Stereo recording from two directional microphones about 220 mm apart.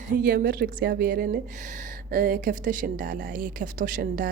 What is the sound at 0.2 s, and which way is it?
Speech, 40° right (ahead or behind).